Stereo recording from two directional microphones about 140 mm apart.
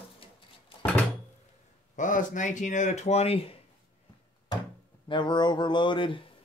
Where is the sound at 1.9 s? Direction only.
65° left (ahead or behind); by 3.5 s 45° left (ahead or behind).